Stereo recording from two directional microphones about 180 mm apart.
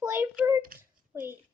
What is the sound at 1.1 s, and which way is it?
Speech, 15° right (ahead or behind).